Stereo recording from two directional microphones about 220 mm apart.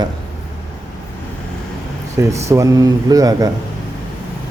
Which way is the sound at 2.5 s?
15° right (ahead or behind).